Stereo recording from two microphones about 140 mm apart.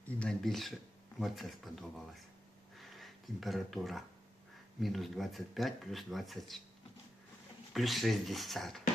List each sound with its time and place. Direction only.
0.2 s speech: 5° left (ahead or behind)
2.7 s a sound: centre (ahead or behind)
4.8 s speech: centre (ahead or behind)
7.7 s speech: centre (ahead or behind)